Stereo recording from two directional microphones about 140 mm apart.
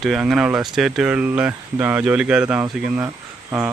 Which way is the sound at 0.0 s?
Centre (ahead or behind).